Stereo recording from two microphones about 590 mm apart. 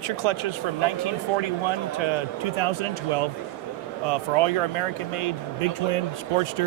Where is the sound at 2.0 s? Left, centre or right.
Right.